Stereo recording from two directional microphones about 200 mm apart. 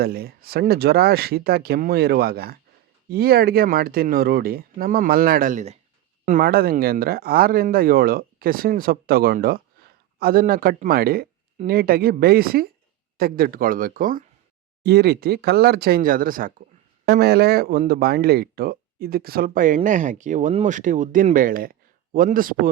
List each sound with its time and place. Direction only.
0.0 s speech: 50° right (ahead or behind)